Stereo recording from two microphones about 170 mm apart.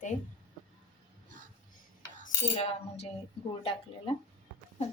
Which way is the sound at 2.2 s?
40° left (ahead or behind).